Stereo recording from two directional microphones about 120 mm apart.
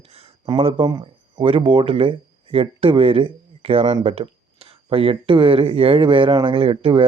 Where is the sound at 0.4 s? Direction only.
50° right (ahead or behind).